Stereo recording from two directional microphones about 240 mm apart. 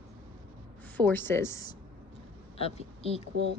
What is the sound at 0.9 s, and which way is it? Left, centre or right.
Speech, centre.